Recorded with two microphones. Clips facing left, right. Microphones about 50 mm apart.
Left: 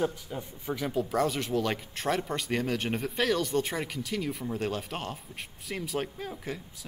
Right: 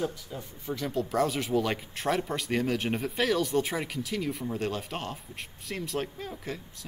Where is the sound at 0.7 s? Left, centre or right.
Centre.